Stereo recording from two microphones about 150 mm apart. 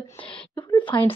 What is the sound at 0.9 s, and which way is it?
Speech, 35° left (ahead or behind).